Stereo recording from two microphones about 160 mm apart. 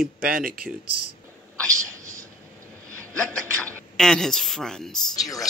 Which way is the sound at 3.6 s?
10° left (ahead or behind).